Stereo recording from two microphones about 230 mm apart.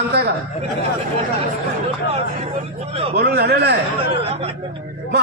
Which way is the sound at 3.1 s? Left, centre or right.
Right.